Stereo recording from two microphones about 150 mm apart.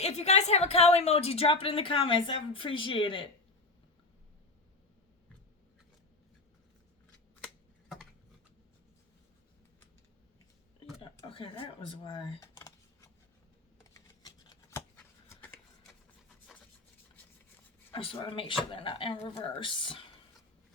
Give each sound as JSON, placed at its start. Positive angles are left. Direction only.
{"t": 0.0, "sound": "a woman's voice", "side_deg": 45}
{"t": 7.4, "sound": "typing", "side_deg": -5}
{"t": 11.3, "sound": "speech", "side_deg": 35}
{"t": 12.4, "sound": "a sound", "side_deg": 20}
{"t": 13.9, "sound": "computer keyboard", "side_deg": 25}
{"t": 15.3, "sound": "a sound", "side_deg": 10}
{"t": 17.9, "sound": "a woman's voice", "side_deg": 40}